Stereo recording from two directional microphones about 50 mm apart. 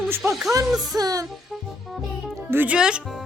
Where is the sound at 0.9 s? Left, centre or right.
Right.